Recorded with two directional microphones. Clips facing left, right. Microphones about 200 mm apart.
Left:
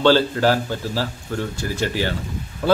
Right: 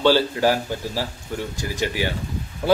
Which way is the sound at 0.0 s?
15° right (ahead or behind).